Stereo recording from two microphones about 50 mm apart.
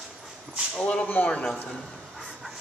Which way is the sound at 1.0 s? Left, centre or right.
Left.